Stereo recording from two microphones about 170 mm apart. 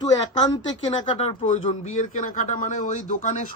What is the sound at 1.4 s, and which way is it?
A man's voice, 45° left (ahead or behind).